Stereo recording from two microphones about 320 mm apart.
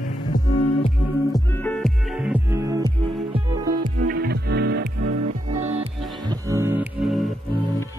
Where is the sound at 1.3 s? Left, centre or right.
Centre.